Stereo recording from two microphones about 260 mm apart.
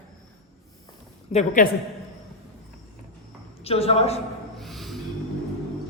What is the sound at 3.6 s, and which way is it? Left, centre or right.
Speech, left.